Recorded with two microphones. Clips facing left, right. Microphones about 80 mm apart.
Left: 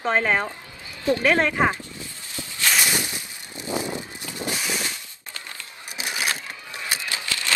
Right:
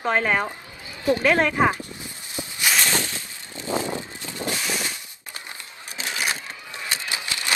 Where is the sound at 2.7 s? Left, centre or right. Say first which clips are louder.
Even; centre.